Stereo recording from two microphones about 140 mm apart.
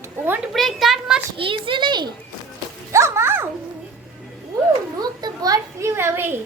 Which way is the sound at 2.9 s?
20° right (ahead or behind).